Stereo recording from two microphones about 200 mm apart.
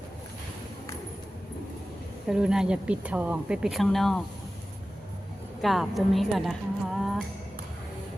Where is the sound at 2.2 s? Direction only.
5° right (ahead or behind).